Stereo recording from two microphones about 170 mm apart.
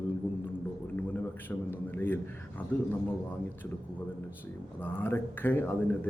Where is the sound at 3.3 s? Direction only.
10° left (ahead or behind).